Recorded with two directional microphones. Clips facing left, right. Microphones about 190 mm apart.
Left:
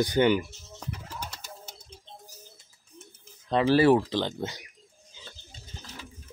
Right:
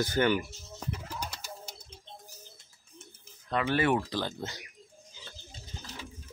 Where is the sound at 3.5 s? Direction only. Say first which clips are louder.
Left 7 dB; 30° left (ahead or behind).